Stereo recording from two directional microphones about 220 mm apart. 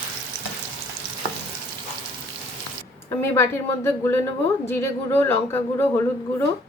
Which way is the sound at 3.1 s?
10° left (ahead or behind).